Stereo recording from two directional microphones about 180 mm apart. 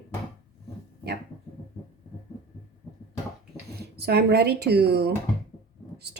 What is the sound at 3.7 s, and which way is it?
A woman's voice, 65° right (ahead or behind).